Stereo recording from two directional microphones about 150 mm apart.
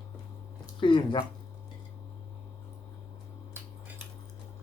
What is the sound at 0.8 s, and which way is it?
Speech, 35° left (ahead or behind).